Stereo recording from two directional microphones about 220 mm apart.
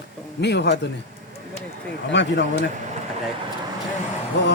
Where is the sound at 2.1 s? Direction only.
55° left (ahead or behind).